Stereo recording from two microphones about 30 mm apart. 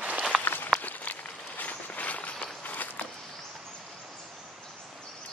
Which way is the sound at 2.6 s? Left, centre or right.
Left.